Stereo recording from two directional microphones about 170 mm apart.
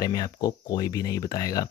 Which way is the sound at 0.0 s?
25° left (ahead or behind).